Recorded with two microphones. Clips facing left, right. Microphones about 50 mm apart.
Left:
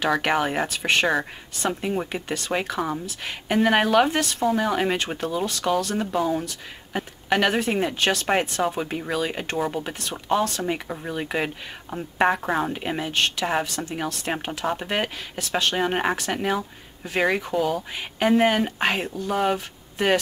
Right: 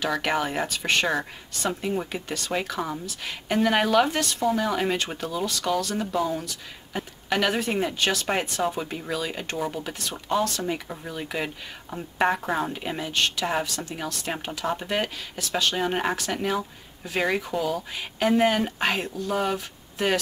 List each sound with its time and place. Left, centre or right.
0.1 s speech: centre
4.6 s speech: centre
8.7 s speech: centre
10.7 s speech: left